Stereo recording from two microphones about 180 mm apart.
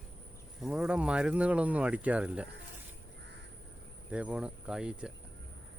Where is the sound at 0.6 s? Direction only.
Centre (ahead or behind).